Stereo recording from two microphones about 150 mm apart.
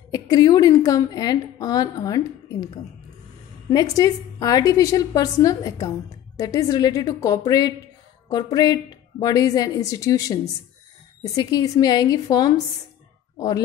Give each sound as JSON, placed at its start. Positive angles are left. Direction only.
{"t": 0.1, "sound": "a woman's voice", "side_deg": 25}
{"t": 3.7, "sound": "a woman's voice", "side_deg": 25}